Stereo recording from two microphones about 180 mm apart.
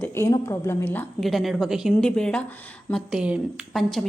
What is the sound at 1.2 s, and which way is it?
A woman's voice, centre (ahead or behind).